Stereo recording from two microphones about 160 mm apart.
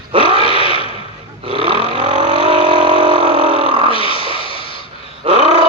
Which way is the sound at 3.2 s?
35° right (ahead or behind).